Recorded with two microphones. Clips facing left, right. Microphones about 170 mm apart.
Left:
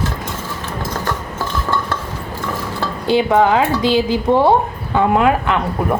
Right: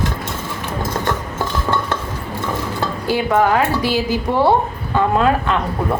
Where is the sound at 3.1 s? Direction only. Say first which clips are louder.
Left 3 dB; 20° left (ahead or behind).